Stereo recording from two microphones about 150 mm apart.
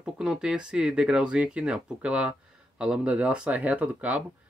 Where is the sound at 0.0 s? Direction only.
5° right (ahead or behind).